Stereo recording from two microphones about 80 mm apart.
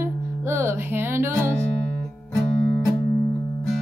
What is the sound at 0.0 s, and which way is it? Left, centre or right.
Music, right.